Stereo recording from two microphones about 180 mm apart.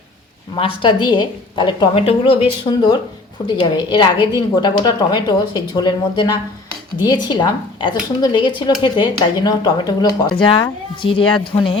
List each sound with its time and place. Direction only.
0.5 s a woman's voice: 30° left (ahead or behind)
11.5 s speech: 40° left (ahead or behind)